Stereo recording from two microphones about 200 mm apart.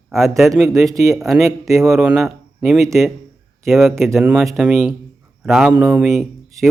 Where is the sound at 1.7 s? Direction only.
15° right (ahead or behind).